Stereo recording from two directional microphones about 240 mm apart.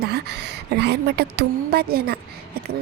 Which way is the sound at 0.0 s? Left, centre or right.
Right.